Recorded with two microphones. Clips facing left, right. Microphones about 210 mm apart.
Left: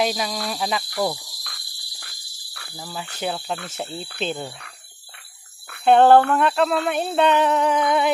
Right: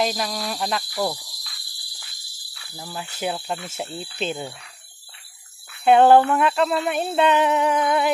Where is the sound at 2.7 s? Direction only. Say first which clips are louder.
Even; centre (ahead or behind).